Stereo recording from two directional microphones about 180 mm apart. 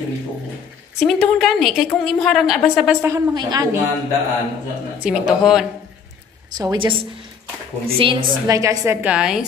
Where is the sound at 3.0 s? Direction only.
15° right (ahead or behind).